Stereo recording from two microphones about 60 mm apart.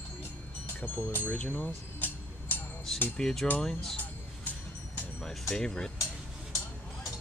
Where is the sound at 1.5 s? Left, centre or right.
Left.